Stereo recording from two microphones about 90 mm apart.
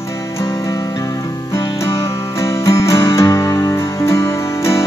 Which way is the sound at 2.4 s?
35° left (ahead or behind).